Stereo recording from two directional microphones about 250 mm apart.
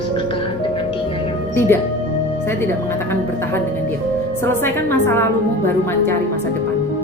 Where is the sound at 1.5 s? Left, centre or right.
Centre.